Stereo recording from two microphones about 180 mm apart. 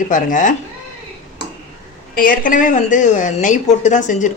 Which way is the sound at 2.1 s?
50° left (ahead or behind).